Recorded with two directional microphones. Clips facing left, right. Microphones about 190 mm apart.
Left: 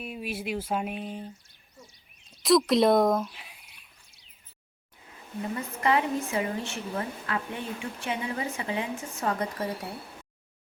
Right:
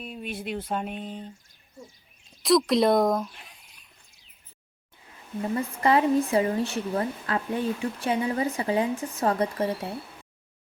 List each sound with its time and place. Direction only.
0.0 s speech: 5° left (ahead or behind)
2.4 s speech: centre (ahead or behind)
5.5 s speech: 35° right (ahead or behind)